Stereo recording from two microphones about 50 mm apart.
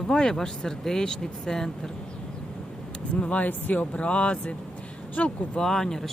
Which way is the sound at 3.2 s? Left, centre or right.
Left.